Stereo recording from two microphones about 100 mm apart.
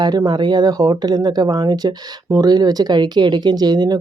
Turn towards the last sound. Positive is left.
turn(degrees=-45)  # may be behind; listen again after turning